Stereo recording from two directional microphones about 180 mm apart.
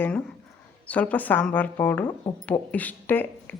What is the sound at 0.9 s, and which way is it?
A woman's voice, 10° left (ahead or behind).